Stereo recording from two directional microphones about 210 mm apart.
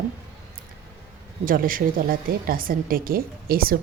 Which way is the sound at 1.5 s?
40° right (ahead or behind).